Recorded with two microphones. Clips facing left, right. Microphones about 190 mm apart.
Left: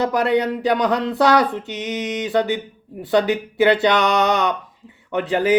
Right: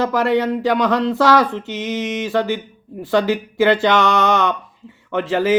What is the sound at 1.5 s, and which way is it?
Speech, 15° left (ahead or behind).